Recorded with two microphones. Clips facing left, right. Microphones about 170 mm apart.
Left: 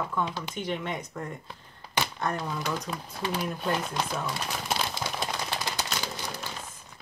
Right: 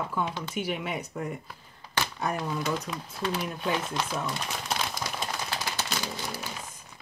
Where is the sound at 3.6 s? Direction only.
Centre (ahead or behind).